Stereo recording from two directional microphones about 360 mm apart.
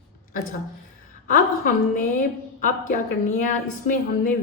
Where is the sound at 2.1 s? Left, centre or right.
Left.